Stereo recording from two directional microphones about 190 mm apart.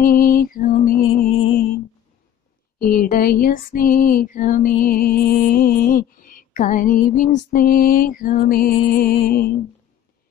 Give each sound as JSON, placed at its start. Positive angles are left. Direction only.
{"t": 0.0, "sound": "music", "side_deg": 50}
{"t": 2.8, "sound": "music", "side_deg": 50}